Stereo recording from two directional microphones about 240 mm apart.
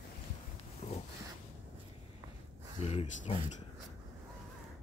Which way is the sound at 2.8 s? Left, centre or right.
Left.